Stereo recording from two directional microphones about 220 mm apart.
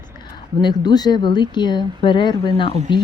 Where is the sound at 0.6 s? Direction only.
20° left (ahead or behind).